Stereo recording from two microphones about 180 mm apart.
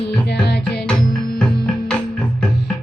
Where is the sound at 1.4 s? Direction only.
5° left (ahead or behind).